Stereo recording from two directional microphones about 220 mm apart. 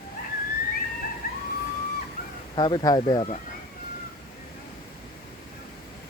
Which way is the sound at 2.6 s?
20° left (ahead or behind).